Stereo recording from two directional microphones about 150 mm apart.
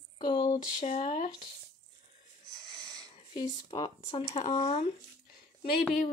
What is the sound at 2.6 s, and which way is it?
Wheeze, 25° right (ahead or behind).